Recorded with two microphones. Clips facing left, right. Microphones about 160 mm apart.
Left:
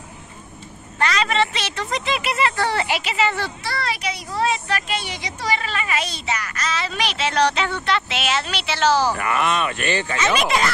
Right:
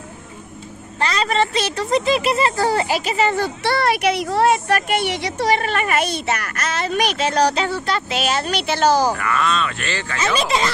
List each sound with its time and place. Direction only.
0.9 s speech: 30° right (ahead or behind)
3.6 s speech: 65° right (ahead or behind); by 8.9 s 45° right (ahead or behind)
9.2 s speech: 20° left (ahead or behind)
10.2 s speech: 30° right (ahead or behind)